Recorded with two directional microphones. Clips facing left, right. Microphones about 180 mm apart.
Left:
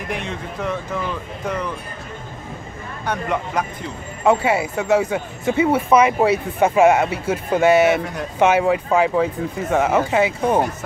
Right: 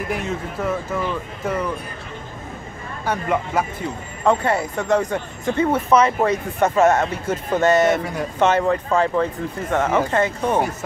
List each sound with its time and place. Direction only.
0.1 s speech: 5° right (ahead or behind)
3.1 s speech: 5° right (ahead or behind)
4.2 s speech: 5° left (ahead or behind)